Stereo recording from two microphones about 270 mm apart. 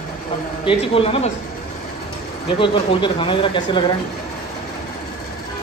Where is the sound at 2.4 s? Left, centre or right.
Centre.